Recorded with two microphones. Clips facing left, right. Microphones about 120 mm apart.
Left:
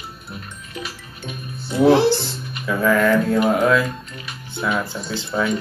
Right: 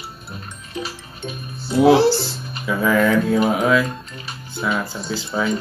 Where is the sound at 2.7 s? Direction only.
5° right (ahead or behind).